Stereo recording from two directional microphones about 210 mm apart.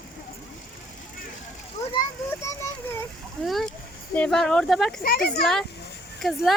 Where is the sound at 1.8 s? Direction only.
30° left (ahead or behind).